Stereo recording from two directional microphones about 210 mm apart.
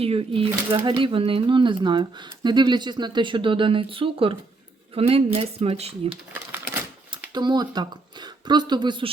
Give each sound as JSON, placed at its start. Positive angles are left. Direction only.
{"t": 0.0, "sound": "speech", "side_deg": -25}
{"t": 7.1, "sound": "speech", "side_deg": -20}